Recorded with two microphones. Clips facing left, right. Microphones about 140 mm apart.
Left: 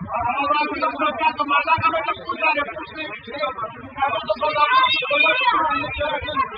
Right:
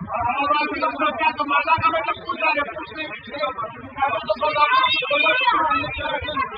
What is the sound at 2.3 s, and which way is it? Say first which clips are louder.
Speech: left 1 dB; 15° left (ahead or behind).